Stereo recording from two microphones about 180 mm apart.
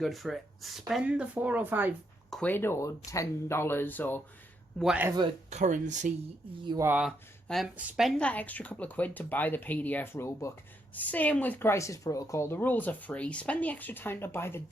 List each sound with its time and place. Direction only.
0.0 s speech: centre (ahead or behind)
2.3 s speech: 10° left (ahead or behind)
4.8 s speech: 5° right (ahead or behind)
5.0 s speech: 25° right (ahead or behind)
5.5 s speech: 40° right (ahead or behind)
6.7 s speech: 20° right (ahead or behind)
6.9 s speech: centre (ahead or behind)